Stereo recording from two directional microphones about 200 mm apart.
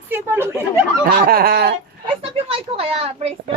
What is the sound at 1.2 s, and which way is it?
Speech, 50° right (ahead or behind).